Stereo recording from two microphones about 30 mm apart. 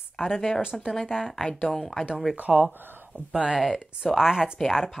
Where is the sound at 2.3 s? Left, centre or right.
Right.